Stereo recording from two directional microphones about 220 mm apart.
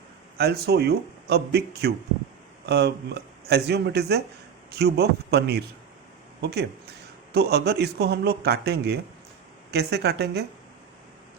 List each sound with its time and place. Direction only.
0.3 s speech: 45° right (ahead or behind)